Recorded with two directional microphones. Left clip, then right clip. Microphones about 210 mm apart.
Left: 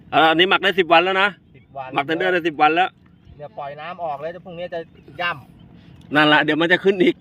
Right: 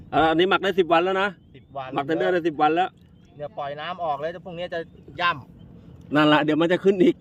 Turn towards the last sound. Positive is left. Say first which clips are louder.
# left 3 dB
turn(degrees=-10)  # may be behind; listen again after turning